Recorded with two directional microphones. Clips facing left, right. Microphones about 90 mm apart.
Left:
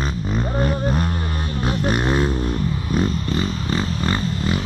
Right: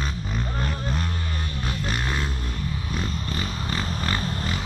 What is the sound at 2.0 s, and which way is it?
Vehicle, 30° left (ahead or behind).